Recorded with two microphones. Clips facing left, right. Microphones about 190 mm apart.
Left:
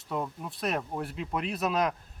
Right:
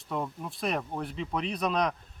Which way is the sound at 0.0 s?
Centre (ahead or behind).